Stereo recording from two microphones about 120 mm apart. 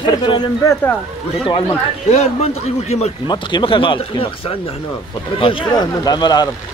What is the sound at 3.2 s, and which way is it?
Speech, 40° left (ahead or behind).